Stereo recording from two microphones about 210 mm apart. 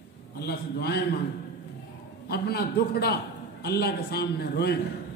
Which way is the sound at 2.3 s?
50° left (ahead or behind).